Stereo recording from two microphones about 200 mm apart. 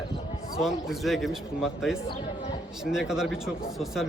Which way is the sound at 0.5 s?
Centre (ahead or behind).